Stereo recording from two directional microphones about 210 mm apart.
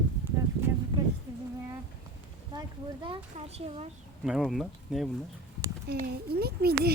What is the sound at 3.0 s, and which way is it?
Speech, 25° right (ahead or behind).